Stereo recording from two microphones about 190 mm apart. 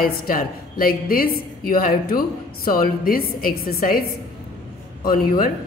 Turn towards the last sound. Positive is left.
turn(degrees=50)  # may be behind; listen again after turning